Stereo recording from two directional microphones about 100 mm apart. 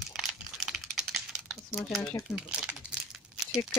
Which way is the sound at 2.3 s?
10° right (ahead or behind).